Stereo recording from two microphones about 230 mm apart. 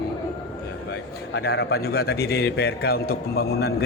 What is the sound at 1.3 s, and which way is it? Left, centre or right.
A man's voice, left.